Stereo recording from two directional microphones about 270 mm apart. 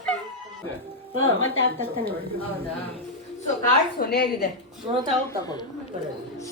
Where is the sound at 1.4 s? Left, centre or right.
Left.